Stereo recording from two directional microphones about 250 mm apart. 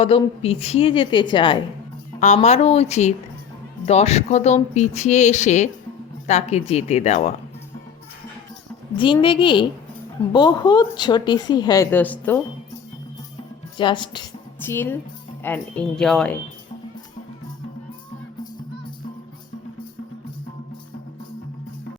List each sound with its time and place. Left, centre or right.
0.0 s speech: left
9.0 s speech: centre
13.7 s a woman's voice: centre